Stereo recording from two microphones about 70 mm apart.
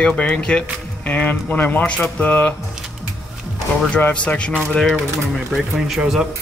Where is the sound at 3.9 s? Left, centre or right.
Centre.